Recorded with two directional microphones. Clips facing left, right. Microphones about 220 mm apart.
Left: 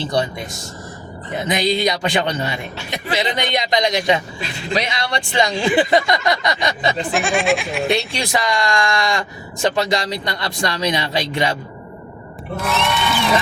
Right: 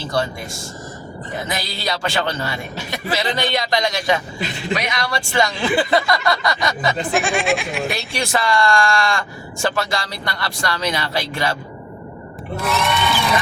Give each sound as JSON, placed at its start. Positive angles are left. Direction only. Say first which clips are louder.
{"t": 0.0, "sound": "speech", "louder": "left 2 dB", "side_deg": 20}
{"t": 1.5, "sound": "speech", "louder": "left 10 dB", "side_deg": 20}
{"t": 6.9, "sound": "speech", "louder": "even", "side_deg": 0}
{"t": 8.1, "sound": "speech", "louder": "right 1 dB", "side_deg": 15}
{"t": 12.5, "sound": "speech", "louder": "even", "side_deg": 0}